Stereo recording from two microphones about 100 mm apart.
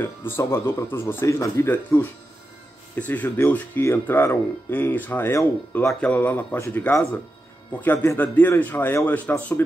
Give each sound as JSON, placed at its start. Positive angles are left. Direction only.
{"t": 0.0, "sound": "speech", "side_deg": 20}
{"t": 1.7, "sound": "speech", "side_deg": 20}
{"t": 5.9, "sound": "speech", "side_deg": 15}